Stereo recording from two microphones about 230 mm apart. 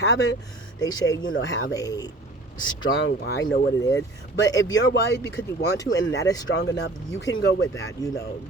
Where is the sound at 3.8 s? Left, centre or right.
Centre.